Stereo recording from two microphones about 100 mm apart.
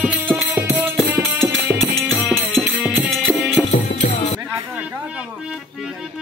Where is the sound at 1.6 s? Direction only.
5° left (ahead or behind).